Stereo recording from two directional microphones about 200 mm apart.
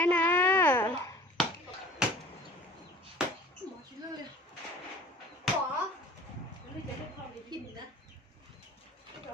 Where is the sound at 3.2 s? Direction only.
5° right (ahead or behind).